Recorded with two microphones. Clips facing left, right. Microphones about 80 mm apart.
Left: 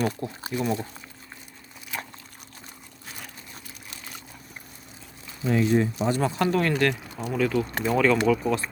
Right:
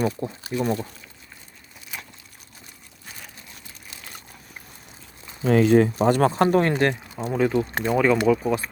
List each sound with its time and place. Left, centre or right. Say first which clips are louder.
0.5 s speech: right 2 dB; right
5.5 s speech: right 6 dB; right
6.0 s speech: right 6 dB; right
6.3 s speech: right 4 dB; right
7.9 s speech: right 2 dB; centre